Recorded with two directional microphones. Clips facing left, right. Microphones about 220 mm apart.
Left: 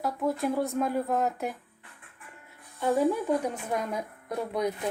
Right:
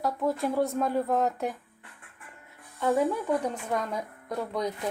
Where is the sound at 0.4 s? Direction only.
5° left (ahead or behind).